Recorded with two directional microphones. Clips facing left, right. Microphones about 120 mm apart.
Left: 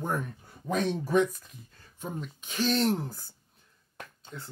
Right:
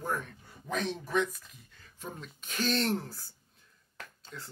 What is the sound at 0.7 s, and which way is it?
Speech, 40° left (ahead or behind).